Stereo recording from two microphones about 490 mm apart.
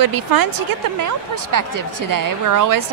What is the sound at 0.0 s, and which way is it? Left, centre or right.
A woman's voice, right.